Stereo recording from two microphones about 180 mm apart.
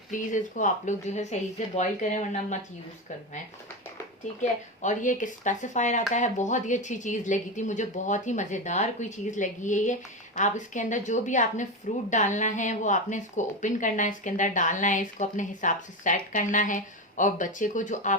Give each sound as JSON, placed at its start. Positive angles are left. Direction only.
{"t": 0.1, "sound": "speech", "side_deg": 45}
{"t": 4.8, "sound": "speech", "side_deg": 45}